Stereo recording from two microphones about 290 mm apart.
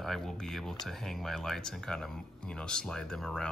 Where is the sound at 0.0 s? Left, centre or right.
Centre.